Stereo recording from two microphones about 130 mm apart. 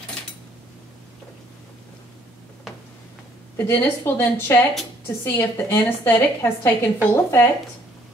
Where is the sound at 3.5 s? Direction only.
15° left (ahead or behind).